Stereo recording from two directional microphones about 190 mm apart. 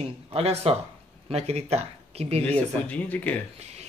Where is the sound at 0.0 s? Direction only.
30° right (ahead or behind).